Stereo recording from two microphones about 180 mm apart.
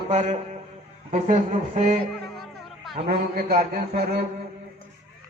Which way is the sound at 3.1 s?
50° right (ahead or behind).